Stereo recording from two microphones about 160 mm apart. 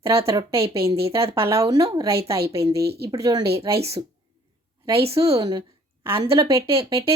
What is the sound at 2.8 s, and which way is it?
Speech, 85° right.